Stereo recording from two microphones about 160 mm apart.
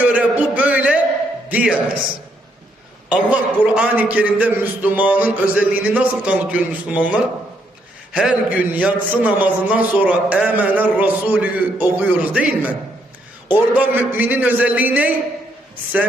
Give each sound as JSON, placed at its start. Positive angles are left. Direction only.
{"t": 0.0, "sound": "a sound", "side_deg": -10}
{"t": 1.5, "sound": "speech", "side_deg": -10}
{"t": 3.1, "sound": "a man's voice", "side_deg": -10}
{"t": 13.7, "sound": "a man's voice", "side_deg": -10}